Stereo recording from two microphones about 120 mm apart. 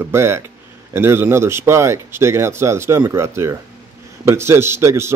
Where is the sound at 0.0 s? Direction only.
20° right (ahead or behind).